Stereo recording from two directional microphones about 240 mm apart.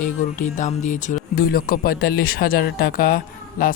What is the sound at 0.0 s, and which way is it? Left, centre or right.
Speech, left.